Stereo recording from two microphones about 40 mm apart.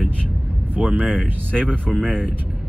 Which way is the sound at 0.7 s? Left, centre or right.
Right.